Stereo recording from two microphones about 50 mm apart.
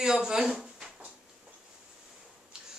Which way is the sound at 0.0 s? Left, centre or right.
Centre.